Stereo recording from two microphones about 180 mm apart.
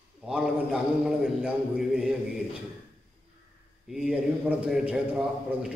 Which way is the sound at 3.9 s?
5° right (ahead or behind).